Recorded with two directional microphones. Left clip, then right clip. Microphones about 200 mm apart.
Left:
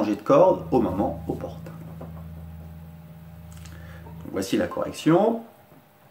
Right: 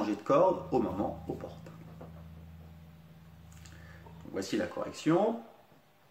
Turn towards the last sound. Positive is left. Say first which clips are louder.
# left 8 dB
turn(degrees=0)  # may be behind; listen again after turning